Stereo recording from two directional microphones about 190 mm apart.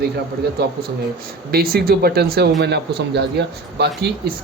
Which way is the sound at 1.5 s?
55° right (ahead or behind).